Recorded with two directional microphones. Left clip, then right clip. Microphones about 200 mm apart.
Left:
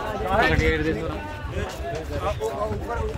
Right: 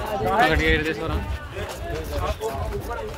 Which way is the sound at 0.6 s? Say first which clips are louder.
Right 2 dB; 50° right (ahead or behind).